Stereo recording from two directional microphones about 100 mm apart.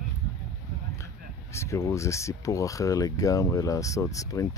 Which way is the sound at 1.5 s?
30° left (ahead or behind).